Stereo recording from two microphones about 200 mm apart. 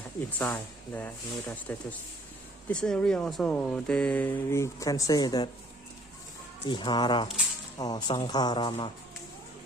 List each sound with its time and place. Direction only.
0.3 s speech: 10° left (ahead or behind)
6.7 s speech: 25° left (ahead or behind)